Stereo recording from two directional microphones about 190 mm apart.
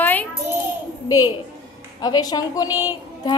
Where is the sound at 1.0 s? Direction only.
20° left (ahead or behind).